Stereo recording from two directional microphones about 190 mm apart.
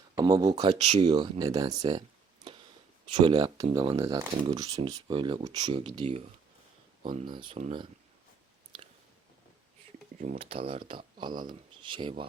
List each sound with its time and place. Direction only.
0.2 s speech: 20° right (ahead or behind)
1.0 s speech: 20° right (ahead or behind)
10.2 s speech: 35° right (ahead or behind)